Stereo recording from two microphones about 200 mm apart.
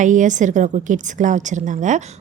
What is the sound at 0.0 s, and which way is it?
A woman's voice, 40° right (ahead or behind).